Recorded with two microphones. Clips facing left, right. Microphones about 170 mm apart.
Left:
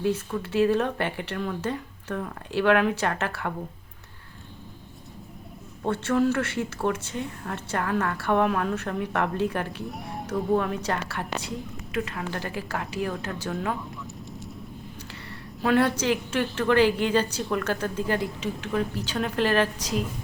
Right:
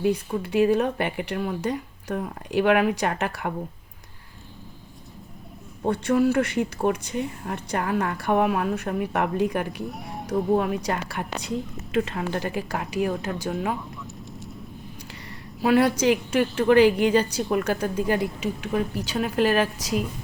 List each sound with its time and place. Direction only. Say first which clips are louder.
0.0 s speech: right 3 dB; 15° right (ahead or behind)
5.8 s speech: right 2 dB; 15° right (ahead or behind)
9.9 s speech: even; centre (ahead or behind)
10.2 s a woman's voice: right 2 dB; 10° right (ahead or behind)
14.0 s vehicle: even; centre (ahead or behind)
15.3 s speech: right 3 dB; 15° right (ahead or behind)